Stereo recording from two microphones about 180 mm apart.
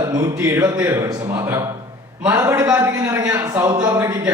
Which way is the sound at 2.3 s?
15° right (ahead or behind).